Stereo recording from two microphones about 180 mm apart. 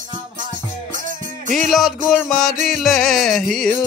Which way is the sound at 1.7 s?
Centre (ahead or behind).